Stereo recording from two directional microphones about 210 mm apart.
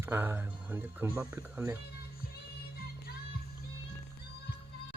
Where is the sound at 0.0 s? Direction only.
10° right (ahead or behind).